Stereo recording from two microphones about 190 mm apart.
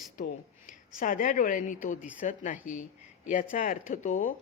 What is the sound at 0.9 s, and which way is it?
A woman's voice, 45° left (ahead or behind).